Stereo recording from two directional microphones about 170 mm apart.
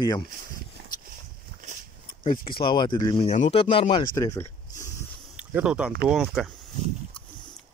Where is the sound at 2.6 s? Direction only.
25° left (ahead or behind).